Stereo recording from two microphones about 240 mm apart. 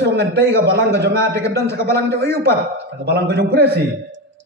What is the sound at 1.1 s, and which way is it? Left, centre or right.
A man's voice, centre.